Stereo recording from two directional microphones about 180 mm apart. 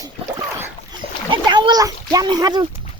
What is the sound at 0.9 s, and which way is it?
Splash, 25° right (ahead or behind).